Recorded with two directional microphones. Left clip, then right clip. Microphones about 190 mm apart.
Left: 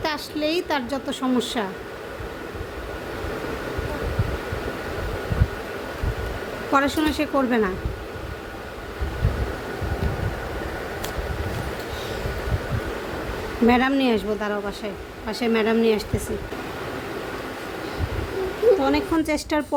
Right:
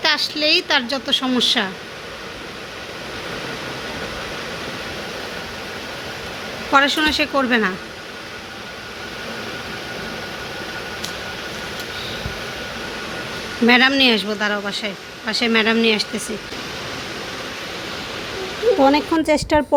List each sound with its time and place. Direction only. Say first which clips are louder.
0.0 s speech: right 7 dB; 5° left (ahead or behind)
6.7 s speech: right 6 dB; 5° left (ahead or behind)
13.7 s speech: right 6 dB; 10° left (ahead or behind)
18.8 s a woman's voice: right 6 dB; 25° right (ahead or behind)